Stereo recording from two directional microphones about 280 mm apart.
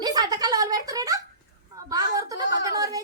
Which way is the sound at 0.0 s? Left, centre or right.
Centre.